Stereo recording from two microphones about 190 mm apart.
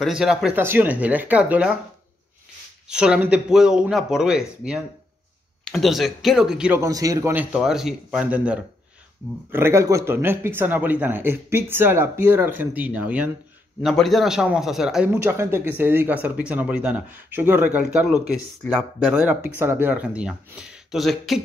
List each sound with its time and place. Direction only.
0.0 s speech: 5° right (ahead or behind)
2.9 s speech: 5° right (ahead or behind)
6.8 s speech: 20° right (ahead or behind)
7.5 s speech: centre (ahead or behind)
15.0 s speech: 15° right (ahead or behind); by 19.1 s 5° left (ahead or behind)
19.1 s speech: 10° right (ahead or behind)